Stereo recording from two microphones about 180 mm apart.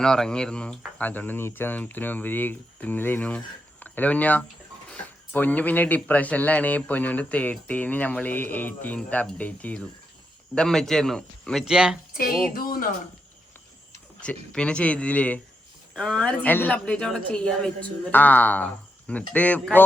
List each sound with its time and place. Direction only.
0.0 s speech: 5° left (ahead or behind)
12.1 s music: 55° left (ahead or behind)
12.5 s speech: 55° left (ahead or behind)
14.2 s speech: 5° left (ahead or behind)